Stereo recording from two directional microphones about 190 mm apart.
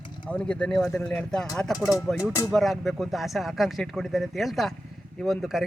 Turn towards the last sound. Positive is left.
turn(degrees=0)  # may be behind; listen again after turning